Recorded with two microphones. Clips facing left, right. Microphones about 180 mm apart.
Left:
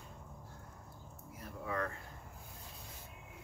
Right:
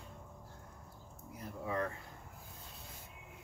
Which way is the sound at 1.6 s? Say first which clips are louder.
Right 1 dB; 20° right (ahead or behind).